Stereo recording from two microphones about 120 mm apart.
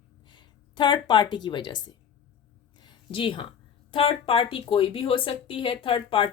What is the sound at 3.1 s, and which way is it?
A woman's voice, 45° left (ahead or behind).